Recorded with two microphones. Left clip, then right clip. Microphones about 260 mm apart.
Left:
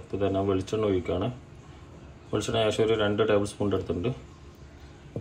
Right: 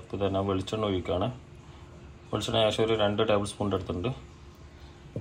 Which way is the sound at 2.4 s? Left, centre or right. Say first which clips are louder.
Even; centre.